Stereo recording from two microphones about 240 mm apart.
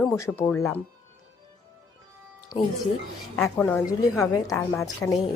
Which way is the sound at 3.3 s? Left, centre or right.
Centre.